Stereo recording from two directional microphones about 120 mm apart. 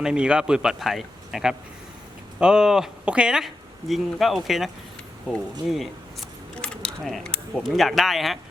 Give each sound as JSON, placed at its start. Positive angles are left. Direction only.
{"t": 0.0, "sound": "speech", "side_deg": -5}
{"t": 5.7, "sound": "speech", "side_deg": 0}